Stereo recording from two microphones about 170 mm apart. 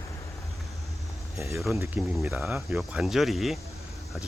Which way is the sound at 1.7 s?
15° right (ahead or behind).